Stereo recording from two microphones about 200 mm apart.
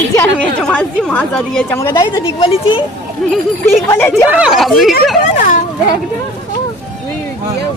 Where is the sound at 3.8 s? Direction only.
10° left (ahead or behind).